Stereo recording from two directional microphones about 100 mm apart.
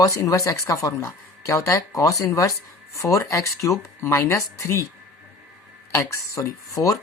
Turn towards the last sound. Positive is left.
turn(degrees=35)  # may be behind; listen again after turning